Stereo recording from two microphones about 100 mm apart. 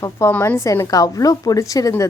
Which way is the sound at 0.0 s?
30° left (ahead or behind).